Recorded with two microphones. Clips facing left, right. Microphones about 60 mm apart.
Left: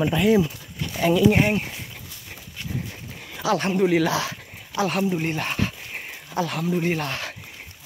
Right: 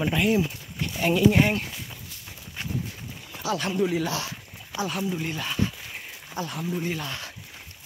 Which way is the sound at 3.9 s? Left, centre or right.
Left.